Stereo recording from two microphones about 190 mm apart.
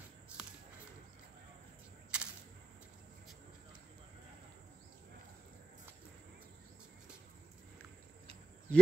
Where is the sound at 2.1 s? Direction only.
5° right (ahead or behind).